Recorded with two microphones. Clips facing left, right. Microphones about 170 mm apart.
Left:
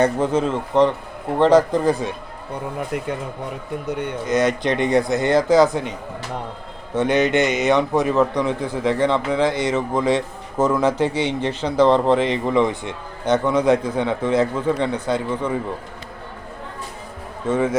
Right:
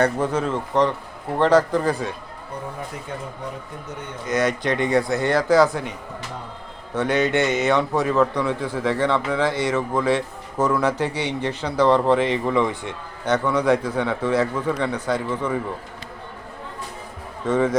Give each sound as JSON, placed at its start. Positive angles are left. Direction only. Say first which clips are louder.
{"t": 0.0, "sound": "a man's voice", "louder": "left 3 dB", "side_deg": 20}
{"t": 2.7, "sound": "speech", "louder": "left 7 dB", "side_deg": 70}
{"t": 4.3, "sound": "a man's voice", "louder": "left 2 dB", "side_deg": 20}
{"t": 6.9, "sound": "a man's voice", "louder": "left 3 dB", "side_deg": 20}
{"t": 17.4, "sound": "speech", "louder": "even", "side_deg": 10}